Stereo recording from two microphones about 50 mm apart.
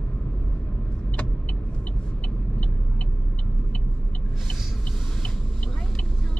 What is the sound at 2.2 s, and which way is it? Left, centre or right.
Vehicle, left.